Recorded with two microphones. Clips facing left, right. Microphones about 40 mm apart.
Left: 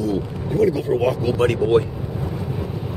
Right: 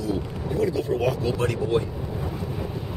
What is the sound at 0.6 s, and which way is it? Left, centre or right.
Speech, centre.